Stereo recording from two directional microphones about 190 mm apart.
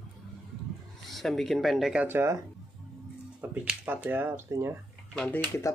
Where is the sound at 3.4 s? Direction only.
10° right (ahead or behind).